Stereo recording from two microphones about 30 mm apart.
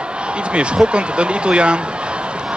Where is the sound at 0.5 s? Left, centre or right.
Right.